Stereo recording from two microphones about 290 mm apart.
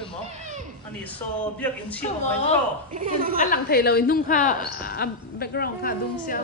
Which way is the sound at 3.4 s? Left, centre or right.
Left.